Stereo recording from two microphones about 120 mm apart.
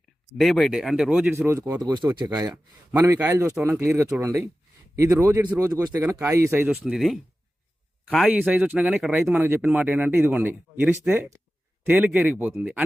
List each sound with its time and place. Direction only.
0.6 s speech: 5° right (ahead or behind)
1.4 s speech: 20° right (ahead or behind)
1.8 s speech: 35° right (ahead or behind)
3.1 s speech: 20° right (ahead or behind)
6.7 s speech: 5° right (ahead or behind)
8.3 s speech: 10° right (ahead or behind)